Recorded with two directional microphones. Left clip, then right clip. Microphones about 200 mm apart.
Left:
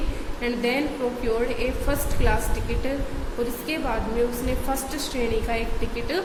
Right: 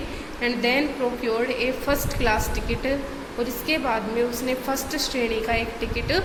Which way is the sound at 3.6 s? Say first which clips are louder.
Right 7 dB; 5° right (ahead or behind).